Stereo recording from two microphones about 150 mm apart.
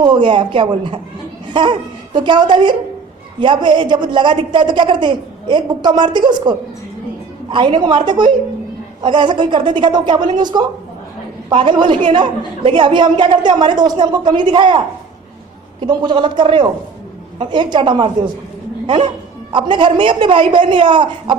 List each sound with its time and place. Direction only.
0.0 s a woman's voice: 30° right (ahead or behind)
15.8 s a woman's voice: 30° right (ahead or behind)